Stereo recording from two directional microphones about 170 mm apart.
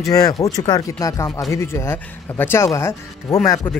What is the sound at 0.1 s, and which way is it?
Speech, 20° left (ahead or behind).